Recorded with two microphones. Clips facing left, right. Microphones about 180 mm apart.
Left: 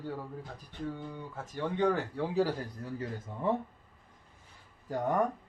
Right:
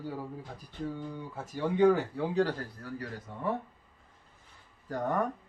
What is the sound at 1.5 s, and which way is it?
Speech, 10° right (ahead or behind).